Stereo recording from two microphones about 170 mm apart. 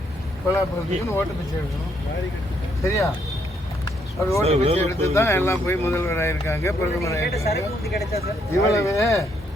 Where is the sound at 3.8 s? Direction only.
20° left (ahead or behind).